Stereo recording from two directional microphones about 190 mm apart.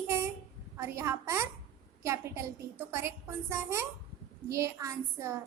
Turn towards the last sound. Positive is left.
turn(degrees=-15)  # may be behind; listen again after turning